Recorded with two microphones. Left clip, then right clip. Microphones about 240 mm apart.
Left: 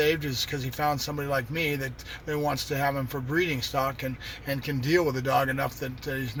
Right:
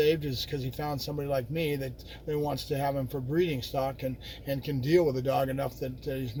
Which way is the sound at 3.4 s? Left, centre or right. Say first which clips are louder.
Left 3 dB; centre.